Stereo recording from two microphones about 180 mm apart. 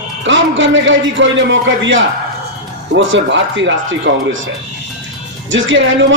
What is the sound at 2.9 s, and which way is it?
A man's voice, 85° right.